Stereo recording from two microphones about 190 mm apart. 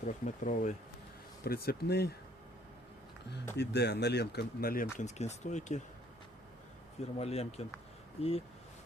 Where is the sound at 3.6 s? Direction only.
60° left (ahead or behind).